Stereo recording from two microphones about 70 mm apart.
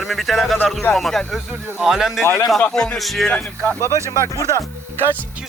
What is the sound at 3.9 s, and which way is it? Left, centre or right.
Speech, left.